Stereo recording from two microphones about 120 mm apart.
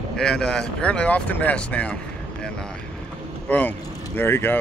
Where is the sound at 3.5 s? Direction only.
15° left (ahead or behind).